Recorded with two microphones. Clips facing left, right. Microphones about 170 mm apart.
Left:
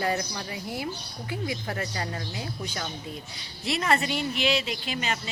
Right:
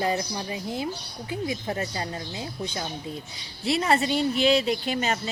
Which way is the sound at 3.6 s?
30° right (ahead or behind).